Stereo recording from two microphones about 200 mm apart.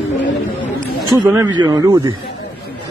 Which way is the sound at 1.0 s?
20° right (ahead or behind).